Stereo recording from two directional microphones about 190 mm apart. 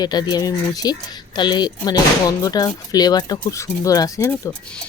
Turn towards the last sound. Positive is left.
turn(degrees=15)  # may be behind; listen again after turning